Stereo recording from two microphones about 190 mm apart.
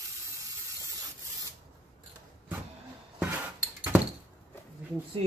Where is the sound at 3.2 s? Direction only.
10° right (ahead or behind).